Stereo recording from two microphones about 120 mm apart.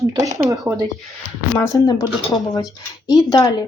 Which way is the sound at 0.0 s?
30° right (ahead or behind).